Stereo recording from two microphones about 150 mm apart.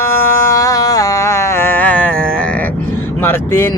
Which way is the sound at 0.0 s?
20° left (ahead or behind).